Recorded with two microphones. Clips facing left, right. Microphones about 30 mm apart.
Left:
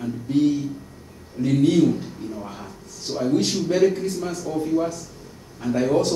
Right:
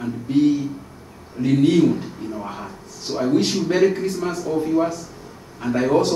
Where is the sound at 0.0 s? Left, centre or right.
Centre.